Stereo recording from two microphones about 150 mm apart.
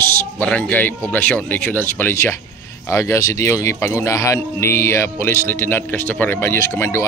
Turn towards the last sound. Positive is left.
turn(degrees=15)  # may be behind; listen again after turning